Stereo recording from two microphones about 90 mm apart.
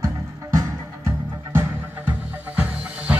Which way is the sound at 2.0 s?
15° right (ahead or behind).